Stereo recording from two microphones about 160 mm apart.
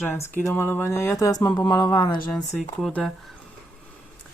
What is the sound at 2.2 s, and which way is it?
Speech, 5° left (ahead or behind).